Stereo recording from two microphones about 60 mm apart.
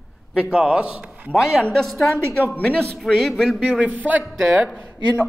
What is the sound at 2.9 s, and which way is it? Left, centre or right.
Speech, centre.